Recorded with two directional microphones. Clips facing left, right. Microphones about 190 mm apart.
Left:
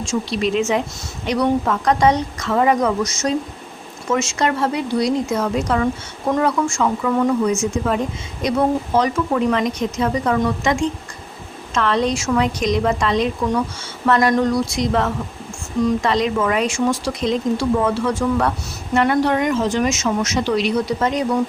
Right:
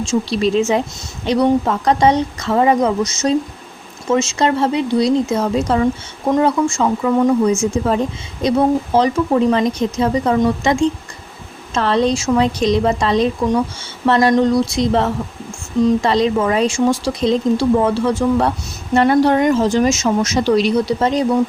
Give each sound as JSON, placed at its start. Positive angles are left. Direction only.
{"t": 0.0, "sound": "speech", "side_deg": -30}